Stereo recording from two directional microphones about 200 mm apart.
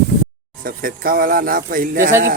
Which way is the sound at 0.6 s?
45° right (ahead or behind).